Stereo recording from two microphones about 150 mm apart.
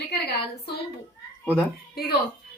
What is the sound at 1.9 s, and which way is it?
Speech, 90° left.